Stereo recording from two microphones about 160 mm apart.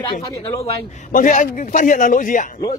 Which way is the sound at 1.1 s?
55° left (ahead or behind).